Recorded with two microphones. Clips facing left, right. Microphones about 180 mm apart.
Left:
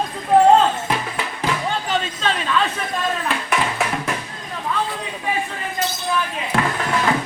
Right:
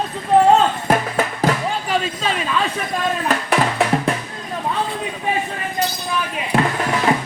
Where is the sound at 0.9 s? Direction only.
45° right (ahead or behind).